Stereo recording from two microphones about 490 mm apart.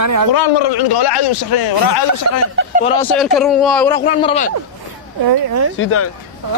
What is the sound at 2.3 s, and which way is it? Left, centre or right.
Speech, right.